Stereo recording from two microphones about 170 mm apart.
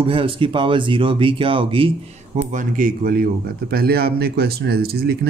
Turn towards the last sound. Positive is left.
turn(degrees=-65)  # may be behind; listen again after turning